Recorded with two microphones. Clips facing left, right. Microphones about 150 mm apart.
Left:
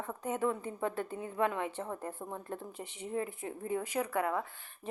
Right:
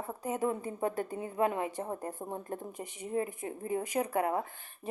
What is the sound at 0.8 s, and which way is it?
Speech, 40° right (ahead or behind).